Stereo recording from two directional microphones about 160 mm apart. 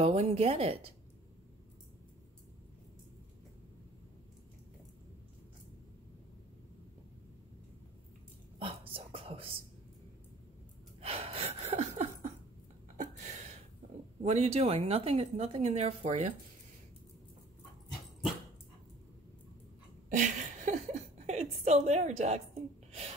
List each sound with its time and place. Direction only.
0.0 s a woman's voice: 40° right (ahead or behind)
8.5 s whispering: 35° right (ahead or behind)
11.0 s gasp: 40° right (ahead or behind)
12.9 s a sound: 45° right (ahead or behind)
14.2 s a woman's voice: 45° right (ahead or behind)
20.1 s a woman's voice: 50° right (ahead or behind)